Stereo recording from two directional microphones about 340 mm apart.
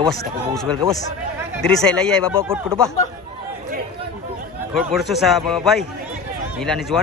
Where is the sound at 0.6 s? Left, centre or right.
Centre.